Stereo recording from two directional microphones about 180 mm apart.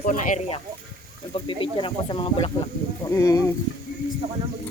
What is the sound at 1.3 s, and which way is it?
Speech, 30° left (ahead or behind).